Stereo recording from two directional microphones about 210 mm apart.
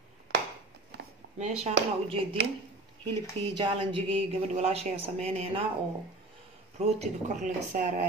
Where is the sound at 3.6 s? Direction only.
25° right (ahead or behind).